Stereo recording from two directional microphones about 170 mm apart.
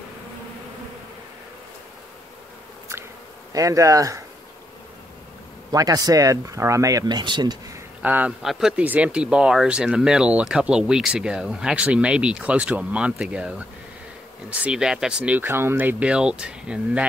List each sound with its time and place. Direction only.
3.5 s speech: 20° right (ahead or behind)
5.7 s speech: 20° right (ahead or behind)
8.0 s speech: 10° right (ahead or behind)